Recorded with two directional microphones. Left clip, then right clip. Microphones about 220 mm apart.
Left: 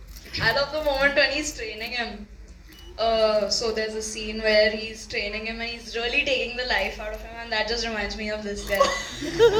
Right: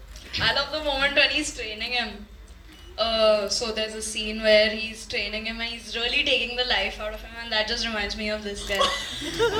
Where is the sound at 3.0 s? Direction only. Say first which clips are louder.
Even; 55° right (ahead or behind).